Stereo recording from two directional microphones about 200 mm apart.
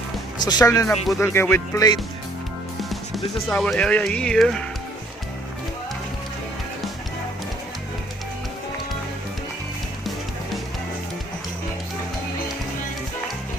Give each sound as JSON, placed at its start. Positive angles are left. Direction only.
{"t": 0.4, "sound": "speech", "side_deg": 20}
{"t": 2.9, "sound": "speech", "side_deg": 0}